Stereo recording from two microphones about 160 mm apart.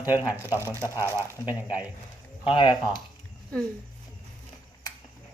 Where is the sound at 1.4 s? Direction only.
10° right (ahead or behind).